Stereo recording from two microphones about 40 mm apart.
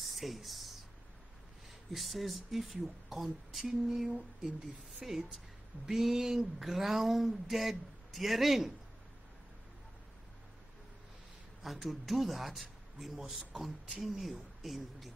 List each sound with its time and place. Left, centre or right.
0.0 s a sound: centre
1.9 s speech: centre
11.6 s speech: centre
13.2 s a man's voice: right
14.0 s speech: centre